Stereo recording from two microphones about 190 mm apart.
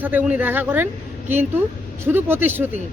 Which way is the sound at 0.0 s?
10° right (ahead or behind).